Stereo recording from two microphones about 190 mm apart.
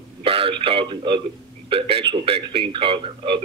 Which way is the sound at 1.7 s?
30° right (ahead or behind).